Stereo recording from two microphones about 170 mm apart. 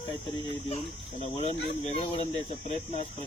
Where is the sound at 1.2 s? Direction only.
35° left (ahead or behind).